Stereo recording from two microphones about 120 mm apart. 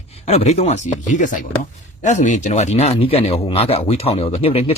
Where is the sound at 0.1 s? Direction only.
60° left (ahead or behind).